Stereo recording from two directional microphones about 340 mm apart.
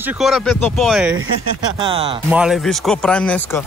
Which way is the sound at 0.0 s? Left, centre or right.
Centre.